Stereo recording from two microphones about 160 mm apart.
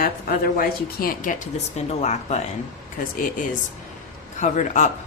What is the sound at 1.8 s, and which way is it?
Speech, 45° left (ahead or behind).